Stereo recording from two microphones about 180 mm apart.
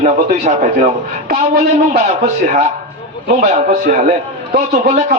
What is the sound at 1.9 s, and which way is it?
Speech, 40° right (ahead or behind).